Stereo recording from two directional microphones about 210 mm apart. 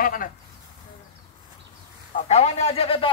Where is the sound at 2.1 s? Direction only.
35° left (ahead or behind).